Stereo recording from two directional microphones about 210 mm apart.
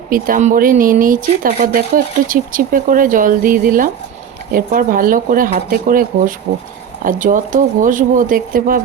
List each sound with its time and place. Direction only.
0.1 s speech: 40° right (ahead or behind)